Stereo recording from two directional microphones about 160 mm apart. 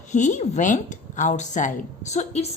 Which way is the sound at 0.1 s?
50° left (ahead or behind).